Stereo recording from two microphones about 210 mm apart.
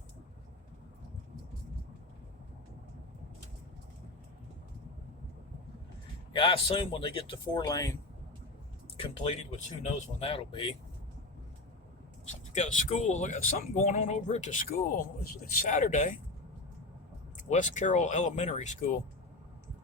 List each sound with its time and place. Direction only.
6.3 s speech: 25° left (ahead or behind)
9.0 s speech: 30° left (ahead or behind)
12.3 s speech: 35° left (ahead or behind)
17.3 s speech: 35° left (ahead or behind)